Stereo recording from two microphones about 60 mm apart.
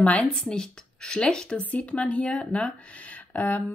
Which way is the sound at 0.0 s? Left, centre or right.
Left.